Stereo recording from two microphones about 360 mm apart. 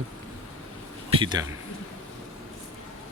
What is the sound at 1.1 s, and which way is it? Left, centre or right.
Speech, centre.